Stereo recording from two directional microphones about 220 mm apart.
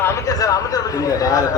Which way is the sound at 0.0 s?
15° left (ahead or behind).